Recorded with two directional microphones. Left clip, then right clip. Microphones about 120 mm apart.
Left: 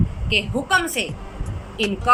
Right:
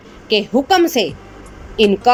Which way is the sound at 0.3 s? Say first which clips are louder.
Right 6 dB; 60° right (ahead or behind).